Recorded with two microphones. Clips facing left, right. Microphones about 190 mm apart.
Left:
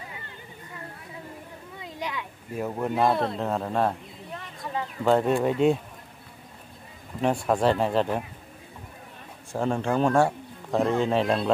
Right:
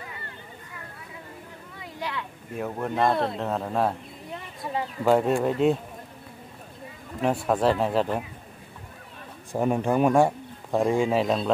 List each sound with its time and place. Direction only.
1.8 s a sound: 15° left (ahead or behind)
2.5 s speech: centre (ahead or behind)
5.0 s speech: 5° right (ahead or behind)
7.2 s speech: centre (ahead or behind)
9.5 s speech: 15° right (ahead or behind)